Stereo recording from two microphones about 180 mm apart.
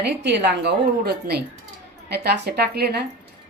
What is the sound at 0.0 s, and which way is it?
A woman's voice, 70° right (ahead or behind).